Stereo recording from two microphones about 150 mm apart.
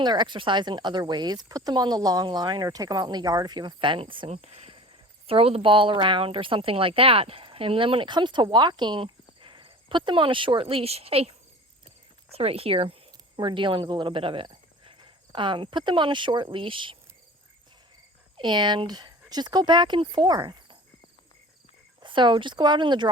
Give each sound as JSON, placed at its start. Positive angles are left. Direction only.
{"t": 0.0, "sound": "a woman's voice", "side_deg": -30}
{"t": 18.3, "sound": "speech", "side_deg": -30}
{"t": 22.0, "sound": "a woman's voice", "side_deg": -30}